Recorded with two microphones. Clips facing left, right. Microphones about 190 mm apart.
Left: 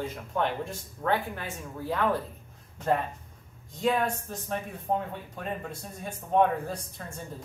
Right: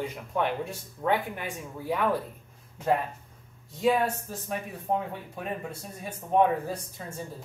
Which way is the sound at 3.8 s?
5° right (ahead or behind).